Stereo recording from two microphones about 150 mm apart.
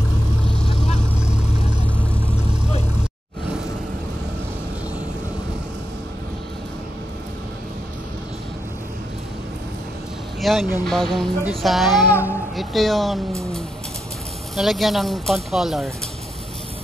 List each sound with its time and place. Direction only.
1.1 s vehicle: 5° right (ahead or behind)
10.4 s speech: centre (ahead or behind)
12.1 s speech: 15° left (ahead or behind)
12.5 s speech: centre (ahead or behind)
14.5 s speech: centre (ahead or behind)